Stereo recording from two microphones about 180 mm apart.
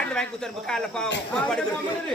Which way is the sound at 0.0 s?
5° left (ahead or behind).